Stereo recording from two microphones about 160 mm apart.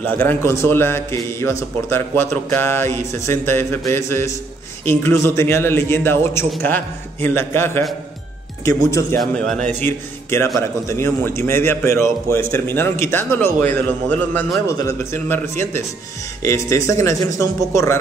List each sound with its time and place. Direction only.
0.0 s a man's voice: 10° left (ahead or behind)
9.2 s a man's voice: 5° left (ahead or behind)
9.8 s a man's voice: 15° left (ahead or behind)